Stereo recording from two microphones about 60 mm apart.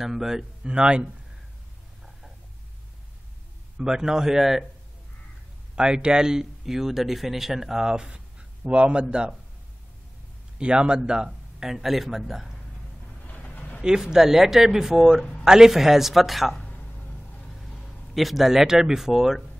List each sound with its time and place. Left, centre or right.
0.0 s speech: centre
3.7 s speech: centre
5.8 s speech: centre
10.6 s speech: centre
13.3 s a sound: left
13.8 s speech: centre